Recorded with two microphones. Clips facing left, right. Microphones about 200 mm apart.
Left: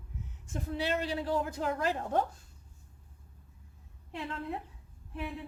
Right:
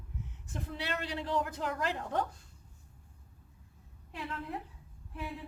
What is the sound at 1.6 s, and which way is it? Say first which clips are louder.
Speech: left 3 dB; 45° left (ahead or behind).